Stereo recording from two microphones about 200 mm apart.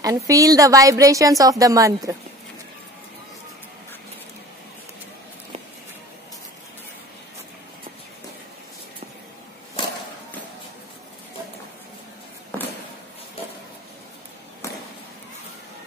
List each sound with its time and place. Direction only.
0.0 s a woman's voice: 15° right (ahead or behind)